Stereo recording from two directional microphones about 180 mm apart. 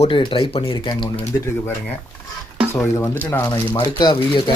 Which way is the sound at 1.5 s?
10° left (ahead or behind).